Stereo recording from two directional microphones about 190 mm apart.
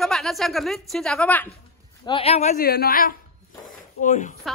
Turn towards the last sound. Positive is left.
turn(degrees=40)  # may be behind; listen again after turning